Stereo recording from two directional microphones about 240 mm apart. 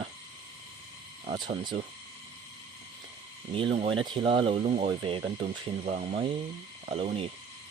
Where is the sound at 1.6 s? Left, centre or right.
Centre.